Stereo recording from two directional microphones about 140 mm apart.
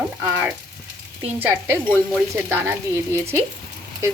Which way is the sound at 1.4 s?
15° right (ahead or behind).